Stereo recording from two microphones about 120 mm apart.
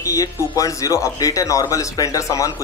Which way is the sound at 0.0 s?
30° left (ahead or behind).